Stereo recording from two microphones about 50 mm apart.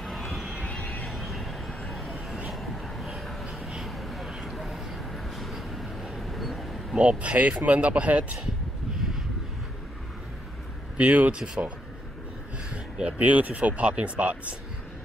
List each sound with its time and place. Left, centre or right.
0.0 s a sound: centre
0.7 s vehicle: left
1.0 s vehicle: centre
1.9 s a sound: centre
2.5 s vehicle: centre
3.4 s a sound: centre
4.3 s vehicle: centre
7.0 s speech: right
11.0 s speech: right
11.3 s speech: centre
12.6 s speech: right